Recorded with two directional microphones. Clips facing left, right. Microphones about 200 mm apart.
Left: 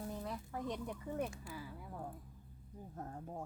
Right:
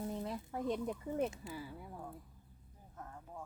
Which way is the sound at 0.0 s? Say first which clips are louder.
Right 3 dB; 20° right (ahead or behind).